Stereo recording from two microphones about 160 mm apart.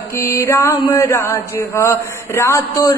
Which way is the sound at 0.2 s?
15° left (ahead or behind).